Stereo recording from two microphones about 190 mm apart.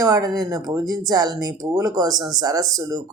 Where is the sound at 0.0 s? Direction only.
20° right (ahead or behind).